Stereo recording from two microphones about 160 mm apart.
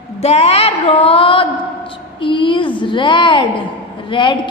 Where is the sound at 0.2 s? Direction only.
40° left (ahead or behind).